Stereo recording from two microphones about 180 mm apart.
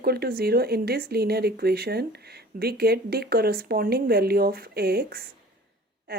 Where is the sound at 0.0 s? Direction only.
60° right (ahead or behind).